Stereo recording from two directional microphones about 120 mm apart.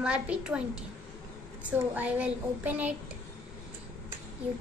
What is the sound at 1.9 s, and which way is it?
A woman's voice, 15° right (ahead or behind).